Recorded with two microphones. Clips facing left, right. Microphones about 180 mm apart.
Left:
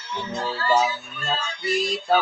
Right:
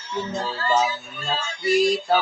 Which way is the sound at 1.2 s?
Centre (ahead or behind).